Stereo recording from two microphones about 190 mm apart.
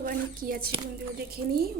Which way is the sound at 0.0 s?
50° right (ahead or behind).